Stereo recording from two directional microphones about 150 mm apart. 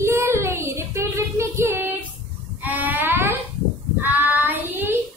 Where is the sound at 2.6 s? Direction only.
10° right (ahead or behind).